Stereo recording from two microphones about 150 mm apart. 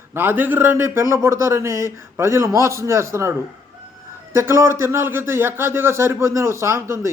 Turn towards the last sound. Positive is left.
turn(degrees=-20)  # may be behind; listen again after turning